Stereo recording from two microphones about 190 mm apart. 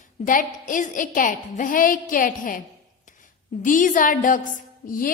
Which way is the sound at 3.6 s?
45° left (ahead or behind).